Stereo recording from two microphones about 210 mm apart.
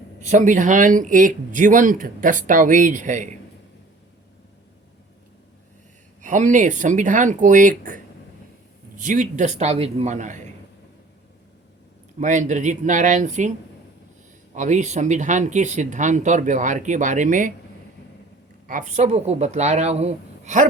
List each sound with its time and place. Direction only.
0.2 s speech: 35° right (ahead or behind)
6.2 s speech: 35° right (ahead or behind)
12.2 s speech: 35° right (ahead or behind)
14.5 s speech: 35° right (ahead or behind)
18.7 s speech: 35° right (ahead or behind)